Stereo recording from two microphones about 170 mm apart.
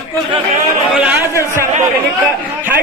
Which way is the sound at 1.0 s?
10° right (ahead or behind).